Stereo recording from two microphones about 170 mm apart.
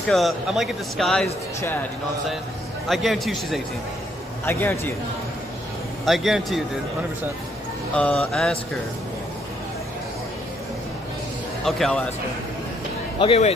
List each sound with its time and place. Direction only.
0.1 s a man's voice: centre (ahead or behind)
2.9 s speech: centre (ahead or behind)
4.5 s a man's voice: 10° left (ahead or behind)
6.0 s speech: centre (ahead or behind)
7.9 s speech: 5° left (ahead or behind)
11.6 s speech: 5° left (ahead or behind)
13.2 s a man's voice: 35° left (ahead or behind)